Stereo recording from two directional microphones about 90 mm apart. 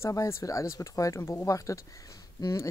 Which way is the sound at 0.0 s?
35° left (ahead or behind).